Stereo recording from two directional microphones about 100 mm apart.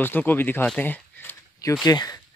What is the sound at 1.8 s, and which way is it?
Speech, 40° left (ahead or behind).